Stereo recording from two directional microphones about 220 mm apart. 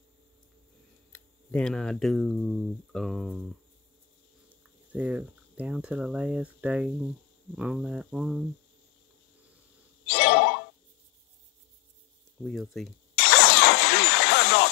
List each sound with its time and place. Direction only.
1.1 s speech: 5° left (ahead or behind)
4.9 s speech: 5° right (ahead or behind)
10.0 s a sound: 50° left (ahead or behind)
12.4 s speech: centre (ahead or behind)
13.1 s vehicle: 50° left (ahead or behind)